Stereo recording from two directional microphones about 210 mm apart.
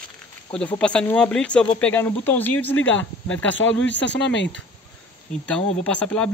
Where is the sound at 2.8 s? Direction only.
65° left (ahead or behind).